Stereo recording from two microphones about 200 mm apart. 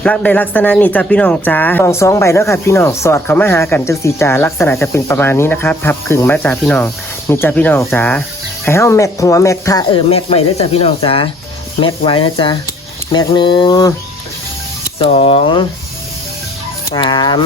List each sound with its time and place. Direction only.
0.0 s speech: 5° left (ahead or behind)
10.1 s speech: 30° left (ahead or behind)
14.9 s speech: 30° left (ahead or behind)
16.9 s speech: 20° left (ahead or behind)